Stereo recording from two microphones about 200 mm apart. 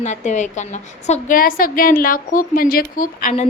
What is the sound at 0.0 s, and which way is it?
A woman's voice, 35° left (ahead or behind).